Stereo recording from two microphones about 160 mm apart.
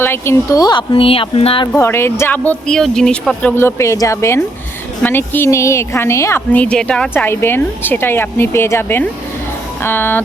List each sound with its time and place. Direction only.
0.0 s speech: 15° left (ahead or behind); by 1.6 s 35° left (ahead or behind)
1.6 s a woman's voice: 15° left (ahead or behind)